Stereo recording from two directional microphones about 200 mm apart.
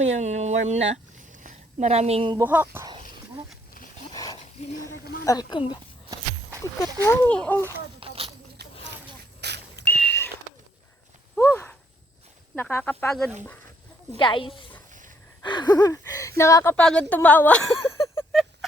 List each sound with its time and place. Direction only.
0.0 s a woman's voice: 35° right (ahead or behind)
2.4 s speech: 10° right (ahead or behind)
4.1 s wild animals: 15° left (ahead or behind)
5.2 s speech: 20° left (ahead or behind)
7.9 s a sound: 25° right (ahead or behind)
9.4 s smoke detector: 55° right (ahead or behind)
9.7 s a sound: 10° left (ahead or behind)
11.3 s a sound: 10° left (ahead or behind)
12.5 s speech: 10° left (ahead or behind)
14.2 s speech: 25° left (ahead or behind)
15.4 s a sound: 20° left (ahead or behind)
16.4 s speech: 15° left (ahead or behind)